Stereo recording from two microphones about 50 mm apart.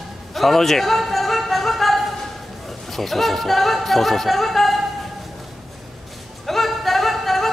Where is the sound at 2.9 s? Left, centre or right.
Centre.